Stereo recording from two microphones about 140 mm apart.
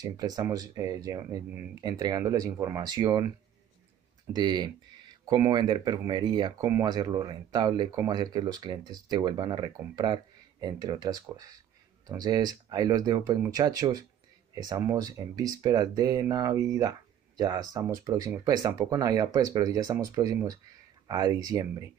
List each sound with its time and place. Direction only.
0.0 s speech: 25° right (ahead or behind)
4.4 s speech: 30° right (ahead or behind)